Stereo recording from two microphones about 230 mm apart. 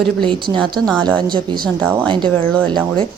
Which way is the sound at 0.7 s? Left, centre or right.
Centre.